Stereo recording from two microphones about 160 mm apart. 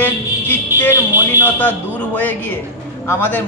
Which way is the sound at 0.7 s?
15° right (ahead or behind).